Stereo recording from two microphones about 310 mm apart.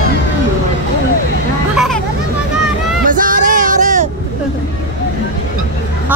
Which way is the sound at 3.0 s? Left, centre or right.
Right.